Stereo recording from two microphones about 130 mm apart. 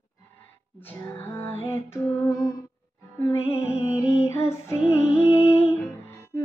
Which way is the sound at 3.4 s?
50° left (ahead or behind).